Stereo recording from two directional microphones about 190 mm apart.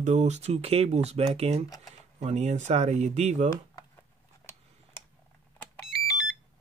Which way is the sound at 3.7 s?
15° left (ahead or behind).